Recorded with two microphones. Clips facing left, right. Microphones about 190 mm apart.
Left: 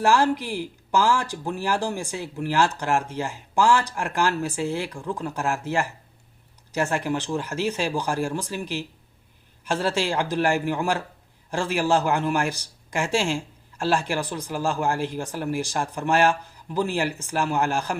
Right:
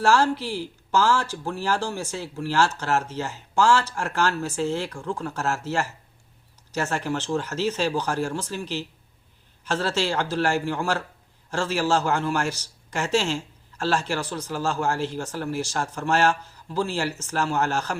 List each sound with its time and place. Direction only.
0.0 s speech: 15° left (ahead or behind)